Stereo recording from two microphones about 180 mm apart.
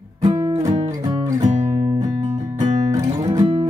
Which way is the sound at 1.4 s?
40° right (ahead or behind).